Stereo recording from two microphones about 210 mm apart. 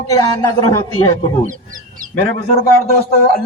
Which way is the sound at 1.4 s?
40° right (ahead or behind).